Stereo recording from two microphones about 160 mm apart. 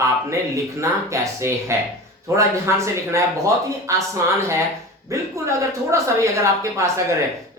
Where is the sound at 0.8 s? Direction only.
20° right (ahead or behind).